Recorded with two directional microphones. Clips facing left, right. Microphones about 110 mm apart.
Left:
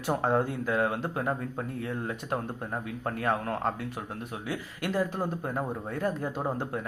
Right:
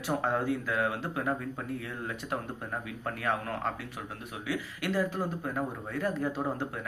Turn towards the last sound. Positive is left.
turn(degrees=15)  # may be behind; listen again after turning